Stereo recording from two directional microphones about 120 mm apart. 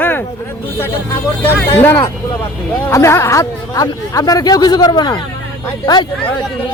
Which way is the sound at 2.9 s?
25° left (ahead or behind).